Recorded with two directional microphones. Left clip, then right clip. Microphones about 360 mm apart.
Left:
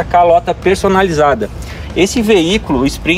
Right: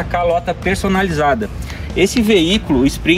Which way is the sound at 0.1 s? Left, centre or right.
Centre.